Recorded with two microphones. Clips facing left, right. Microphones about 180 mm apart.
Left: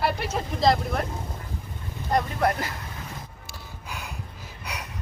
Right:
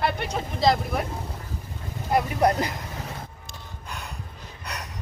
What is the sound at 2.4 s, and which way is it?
Speech, 20° right (ahead or behind).